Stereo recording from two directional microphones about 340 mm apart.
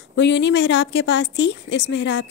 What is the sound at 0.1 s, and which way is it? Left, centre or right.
A woman's voice, left.